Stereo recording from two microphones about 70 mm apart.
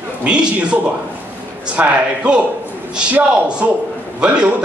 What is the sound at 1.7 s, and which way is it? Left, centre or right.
A man's voice, centre.